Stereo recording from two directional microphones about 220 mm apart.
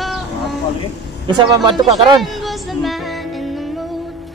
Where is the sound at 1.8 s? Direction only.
20° right (ahead or behind).